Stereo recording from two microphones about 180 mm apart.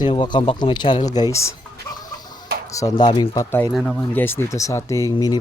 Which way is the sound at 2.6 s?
20° left (ahead or behind).